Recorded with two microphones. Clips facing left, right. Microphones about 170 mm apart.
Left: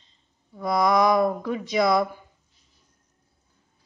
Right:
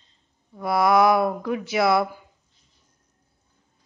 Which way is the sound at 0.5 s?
5° right (ahead or behind).